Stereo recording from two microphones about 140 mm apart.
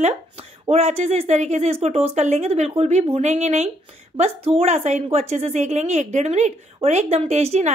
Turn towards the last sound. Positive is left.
turn(degrees=-50)  # may be behind; listen again after turning